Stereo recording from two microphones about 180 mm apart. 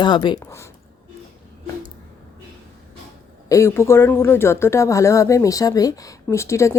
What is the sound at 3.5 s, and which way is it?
Speech, 15° left (ahead or behind).